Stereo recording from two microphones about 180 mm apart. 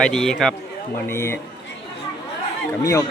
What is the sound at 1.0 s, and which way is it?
Speech, 15° left (ahead or behind).